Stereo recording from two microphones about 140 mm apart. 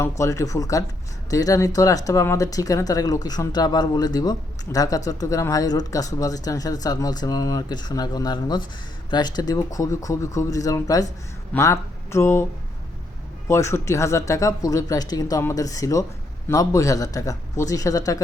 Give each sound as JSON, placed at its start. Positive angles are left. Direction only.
{"t": 0.2, "sound": "speech", "side_deg": 20}
{"t": 13.5, "sound": "speech", "side_deg": 20}